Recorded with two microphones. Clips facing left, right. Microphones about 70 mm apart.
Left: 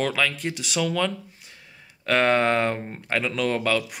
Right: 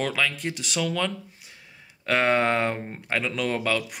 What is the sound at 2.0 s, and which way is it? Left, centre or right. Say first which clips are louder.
Speech: left 2 dB; centre.